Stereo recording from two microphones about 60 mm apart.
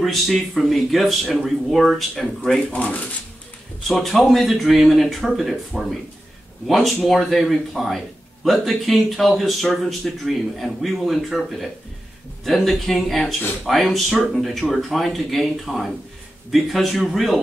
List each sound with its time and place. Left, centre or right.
0.0 s speech: centre
2.7 s speech: left
3.8 s speech: centre